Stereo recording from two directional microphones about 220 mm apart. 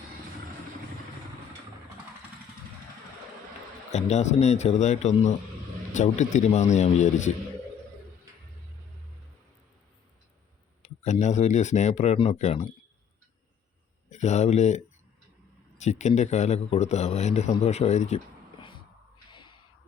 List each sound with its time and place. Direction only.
3.9 s speech: 30° left (ahead or behind)
10.8 s speech: 30° left (ahead or behind)
14.1 s speech: 30° left (ahead or behind)
15.8 s speech: 30° left (ahead or behind)
19.3 s a sound: 20° left (ahead or behind)